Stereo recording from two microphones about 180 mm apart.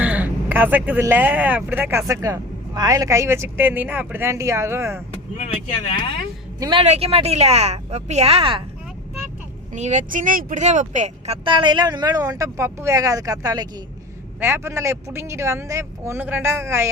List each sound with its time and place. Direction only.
0.0 s speech: 10° right (ahead or behind)
5.4 s speech: 35° left (ahead or behind)
6.6 s a woman's voice: 25° right (ahead or behind)
9.7 s speech: 40° right (ahead or behind); by 16.9 s 15° right (ahead or behind)